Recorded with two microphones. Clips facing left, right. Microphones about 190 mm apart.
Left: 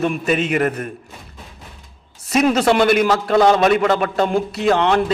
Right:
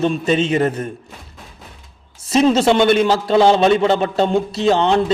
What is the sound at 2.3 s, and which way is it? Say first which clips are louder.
A man's voice: right 2 dB; 25° right (ahead or behind).